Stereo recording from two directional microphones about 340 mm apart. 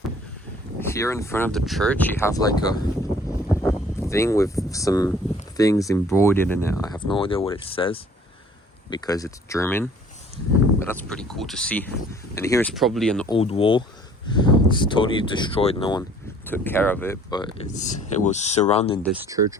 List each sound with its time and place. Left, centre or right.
0.8 s speech: centre
3.5 s a sound: centre
5.5 s speech: centre
13.3 s speech: centre
19.1 s speech: centre